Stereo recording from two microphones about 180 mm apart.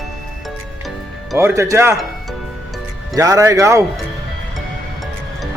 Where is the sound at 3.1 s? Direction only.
20° right (ahead or behind).